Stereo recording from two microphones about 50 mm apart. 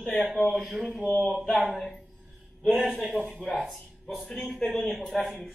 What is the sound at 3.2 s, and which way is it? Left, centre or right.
Speech, left.